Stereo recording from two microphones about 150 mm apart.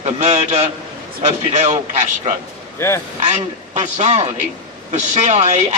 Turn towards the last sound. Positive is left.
turn(degrees=-50)  # may be behind; listen again after turning